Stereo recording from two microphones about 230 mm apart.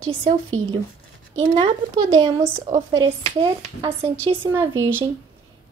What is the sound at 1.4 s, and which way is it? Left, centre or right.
A woman's voice, centre.